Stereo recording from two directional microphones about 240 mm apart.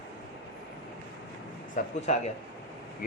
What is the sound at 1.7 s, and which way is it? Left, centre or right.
Speech, left.